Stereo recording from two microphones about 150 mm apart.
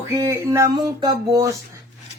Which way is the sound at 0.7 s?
30° right (ahead or behind).